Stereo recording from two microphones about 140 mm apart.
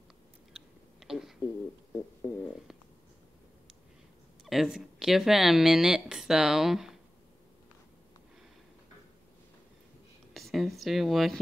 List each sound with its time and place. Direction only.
0.5 s chewing: 5° right (ahead or behind)
4.5 s speech: 5° right (ahead or behind)
10.3 s speech: centre (ahead or behind)